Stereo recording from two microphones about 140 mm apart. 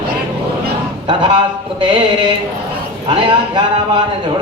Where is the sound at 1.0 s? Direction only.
40° right (ahead or behind).